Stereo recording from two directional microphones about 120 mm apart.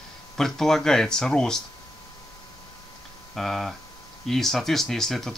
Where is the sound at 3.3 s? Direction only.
Centre (ahead or behind).